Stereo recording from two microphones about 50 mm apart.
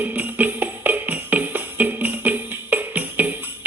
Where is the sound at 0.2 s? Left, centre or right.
Right.